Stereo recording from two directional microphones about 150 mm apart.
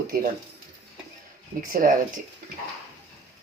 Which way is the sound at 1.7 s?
65° right (ahead or behind).